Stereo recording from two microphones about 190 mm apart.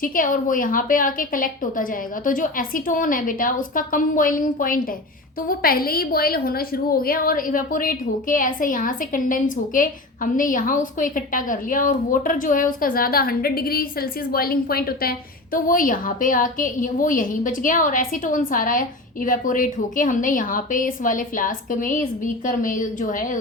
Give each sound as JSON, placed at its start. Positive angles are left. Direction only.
{"t": 0.0, "sound": "a woman's voice", "side_deg": 45}